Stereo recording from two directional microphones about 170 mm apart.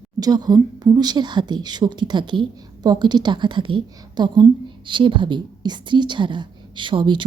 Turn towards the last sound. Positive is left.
turn(degrees=-30)  # may be behind; listen again after turning